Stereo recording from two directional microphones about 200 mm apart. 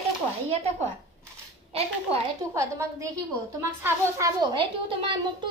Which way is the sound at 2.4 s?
15° right (ahead or behind).